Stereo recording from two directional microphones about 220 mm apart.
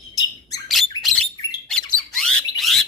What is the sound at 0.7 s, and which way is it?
Bird, centre (ahead or behind).